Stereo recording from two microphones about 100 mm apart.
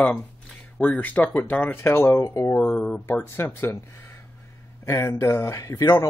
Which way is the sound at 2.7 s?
15° left (ahead or behind).